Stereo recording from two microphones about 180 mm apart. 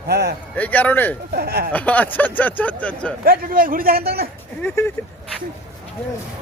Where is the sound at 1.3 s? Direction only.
60° right (ahead or behind).